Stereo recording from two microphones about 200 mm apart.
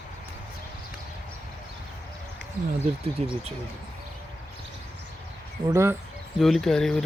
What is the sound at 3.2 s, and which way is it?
Speech, 35° right (ahead or behind).